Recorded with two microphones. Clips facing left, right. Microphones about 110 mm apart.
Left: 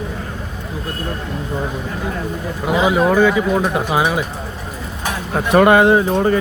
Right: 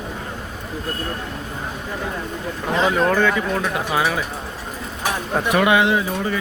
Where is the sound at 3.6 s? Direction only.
25° left (ahead or behind).